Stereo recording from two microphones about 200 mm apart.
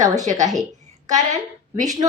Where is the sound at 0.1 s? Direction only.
15° right (ahead or behind).